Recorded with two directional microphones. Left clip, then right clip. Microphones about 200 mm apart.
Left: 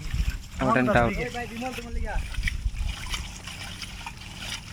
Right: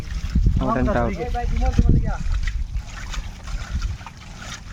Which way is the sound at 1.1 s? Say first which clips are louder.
Right 3 dB; 50° right (ahead or behind).